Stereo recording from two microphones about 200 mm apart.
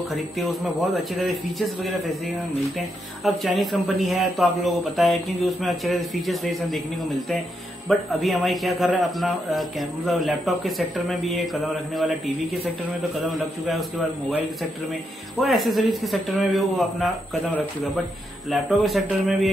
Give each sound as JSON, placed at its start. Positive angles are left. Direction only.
{"t": 0.1, "sound": "a man's voice", "side_deg": 0}
{"t": 13.2, "sound": "a man's voice", "side_deg": 0}
{"t": 15.4, "sound": "a man's voice", "side_deg": 0}